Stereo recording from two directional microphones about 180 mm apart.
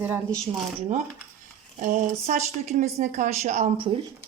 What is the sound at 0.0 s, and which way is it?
Speech, 10° right (ahead or behind).